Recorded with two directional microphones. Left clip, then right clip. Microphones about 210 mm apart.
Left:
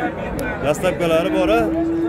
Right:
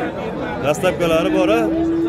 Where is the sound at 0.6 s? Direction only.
Centre (ahead or behind).